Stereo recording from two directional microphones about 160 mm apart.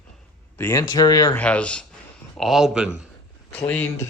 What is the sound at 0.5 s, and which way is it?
Speech, 15° left (ahead or behind).